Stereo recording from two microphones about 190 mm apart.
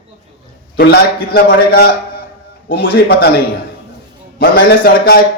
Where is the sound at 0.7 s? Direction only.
55° left (ahead or behind).